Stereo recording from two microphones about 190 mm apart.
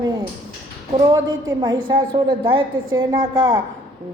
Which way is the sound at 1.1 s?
20° right (ahead or behind).